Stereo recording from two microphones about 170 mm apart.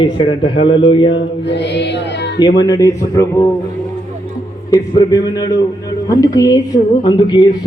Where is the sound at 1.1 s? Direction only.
90° left.